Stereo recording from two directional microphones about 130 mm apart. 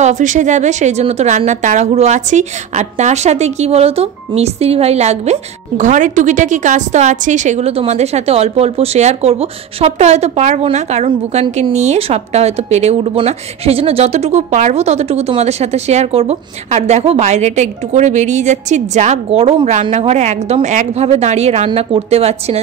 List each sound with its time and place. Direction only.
0.0 s a woman's voice: 70° right (ahead or behind)
19.6 s a woman's voice: 70° right (ahead or behind); by 22.6 s 55° right (ahead or behind)